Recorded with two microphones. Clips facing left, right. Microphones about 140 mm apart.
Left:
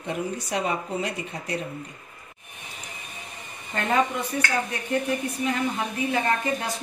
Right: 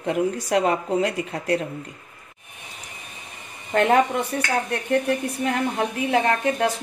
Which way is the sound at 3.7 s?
65° right (ahead or behind).